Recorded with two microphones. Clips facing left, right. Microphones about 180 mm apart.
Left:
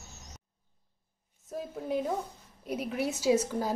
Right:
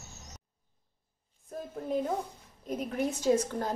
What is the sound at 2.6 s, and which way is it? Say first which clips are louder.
A woman's voice: even; 5° left (ahead or behind).